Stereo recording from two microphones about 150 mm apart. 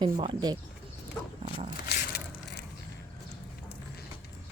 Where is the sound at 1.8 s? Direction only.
90° left.